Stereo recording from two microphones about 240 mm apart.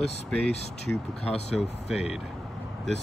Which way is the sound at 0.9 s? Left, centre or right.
Centre.